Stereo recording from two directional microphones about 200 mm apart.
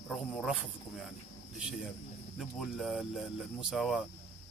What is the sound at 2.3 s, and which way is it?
Speech, centre (ahead or behind).